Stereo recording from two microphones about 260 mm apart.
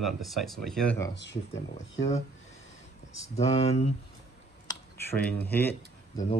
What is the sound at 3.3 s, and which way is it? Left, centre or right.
Speech, left.